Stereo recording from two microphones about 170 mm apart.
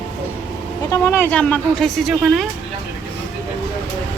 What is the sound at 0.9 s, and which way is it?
Speech, 15° left (ahead or behind).